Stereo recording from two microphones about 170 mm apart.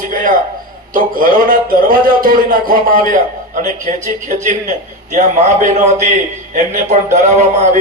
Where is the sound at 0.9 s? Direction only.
55° right (ahead or behind).